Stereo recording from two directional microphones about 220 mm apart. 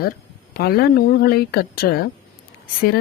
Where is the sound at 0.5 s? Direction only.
45° left (ahead or behind).